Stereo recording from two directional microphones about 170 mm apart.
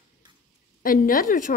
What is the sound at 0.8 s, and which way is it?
Speech, 55° left (ahead or behind).